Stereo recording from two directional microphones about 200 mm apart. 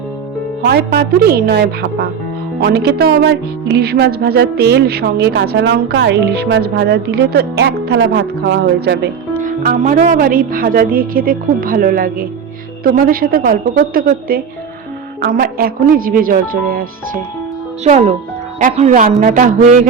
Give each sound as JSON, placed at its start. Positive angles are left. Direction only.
{"t": 0.6, "sound": "music", "side_deg": -50}
{"t": 9.4, "sound": "music", "side_deg": -40}
{"t": 17.8, "sound": "speech", "side_deg": -35}